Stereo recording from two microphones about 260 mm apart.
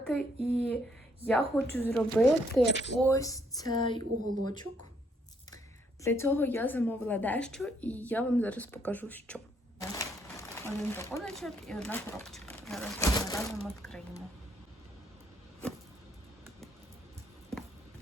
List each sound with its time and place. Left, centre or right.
0.0 s speech: centre
2.6 s speech: left
3.0 s a woman's voice: centre
6.0 s a woman's voice: centre
9.9 s crumpling: centre
11.2 s a woman's voice: centre